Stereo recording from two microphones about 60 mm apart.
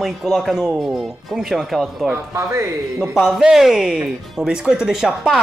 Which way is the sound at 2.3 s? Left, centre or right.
Right.